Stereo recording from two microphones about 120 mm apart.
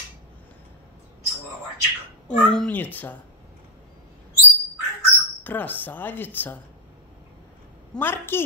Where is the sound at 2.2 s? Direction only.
10° left (ahead or behind).